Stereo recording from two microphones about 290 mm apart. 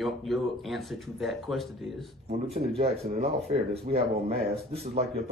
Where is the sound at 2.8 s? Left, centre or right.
Right.